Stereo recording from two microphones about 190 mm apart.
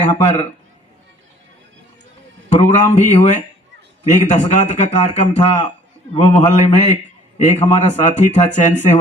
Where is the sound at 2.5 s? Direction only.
40° left (ahead or behind).